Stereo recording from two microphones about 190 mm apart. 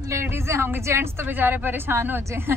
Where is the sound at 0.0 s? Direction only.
15° right (ahead or behind).